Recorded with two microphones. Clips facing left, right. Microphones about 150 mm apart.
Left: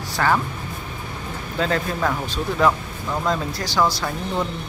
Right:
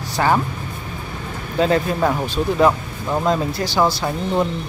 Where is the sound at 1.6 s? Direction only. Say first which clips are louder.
Right 6 dB; 15° right (ahead or behind).